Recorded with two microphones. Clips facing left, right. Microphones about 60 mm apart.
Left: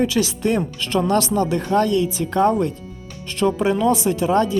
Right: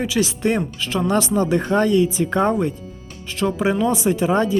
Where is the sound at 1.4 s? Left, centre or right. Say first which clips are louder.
Even; right.